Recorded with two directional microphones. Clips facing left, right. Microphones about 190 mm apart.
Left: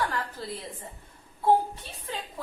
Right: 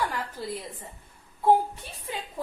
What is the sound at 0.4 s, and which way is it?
Speech, 15° right (ahead or behind).